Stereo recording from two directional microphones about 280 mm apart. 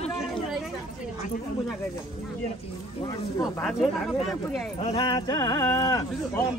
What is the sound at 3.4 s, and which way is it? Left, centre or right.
Speech, centre.